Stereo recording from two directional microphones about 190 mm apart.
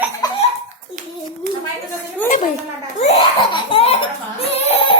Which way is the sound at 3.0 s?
30° left (ahead or behind).